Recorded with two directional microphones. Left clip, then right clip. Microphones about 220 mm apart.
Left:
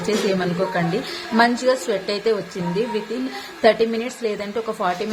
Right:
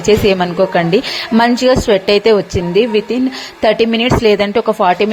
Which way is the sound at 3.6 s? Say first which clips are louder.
Right 5 dB; 35° right (ahead or behind).